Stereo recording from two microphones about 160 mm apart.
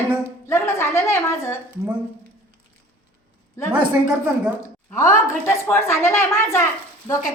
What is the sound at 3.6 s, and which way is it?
A woman's voice, 20° left (ahead or behind).